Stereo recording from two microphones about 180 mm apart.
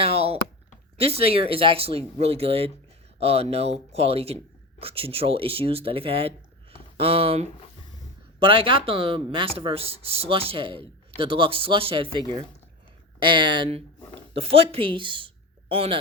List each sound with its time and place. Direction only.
0.0 s a sound: 35° right (ahead or behind)
0.9 s speech: 35° right (ahead or behind)
13.2 s speech: 25° right (ahead or behind)